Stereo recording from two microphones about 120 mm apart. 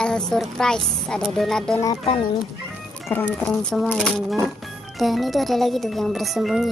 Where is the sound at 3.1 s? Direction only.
15° left (ahead or behind).